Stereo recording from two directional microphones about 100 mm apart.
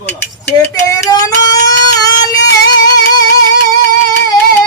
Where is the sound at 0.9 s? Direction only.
35° left (ahead or behind).